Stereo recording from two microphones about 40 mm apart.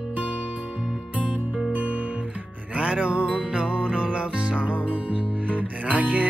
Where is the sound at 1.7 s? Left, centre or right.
Right.